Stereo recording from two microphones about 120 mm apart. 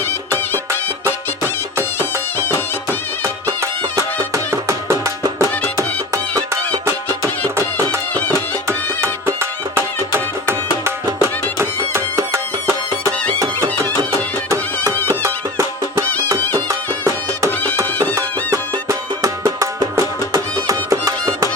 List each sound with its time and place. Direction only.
2.0 s music: 20° left (ahead or behind)
3.2 s music: 25° right (ahead or behind)
8.6 s music: 20° right (ahead or behind)
15.2 s music: 25° right (ahead or behind)